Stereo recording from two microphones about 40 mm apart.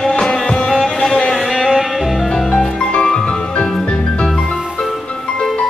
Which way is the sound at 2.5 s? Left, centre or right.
Centre.